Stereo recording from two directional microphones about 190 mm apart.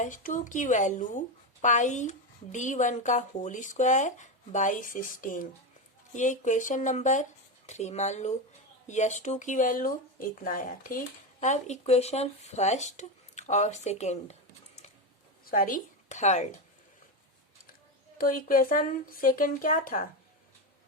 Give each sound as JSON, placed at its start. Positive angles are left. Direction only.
{"t": 0.0, "sound": "speech", "side_deg": 45}
{"t": 15.4, "sound": "a woman's voice", "side_deg": 45}
{"t": 18.2, "sound": "speech", "side_deg": 45}